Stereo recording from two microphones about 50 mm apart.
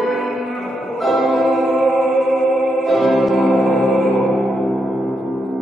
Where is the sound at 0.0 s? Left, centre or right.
Centre.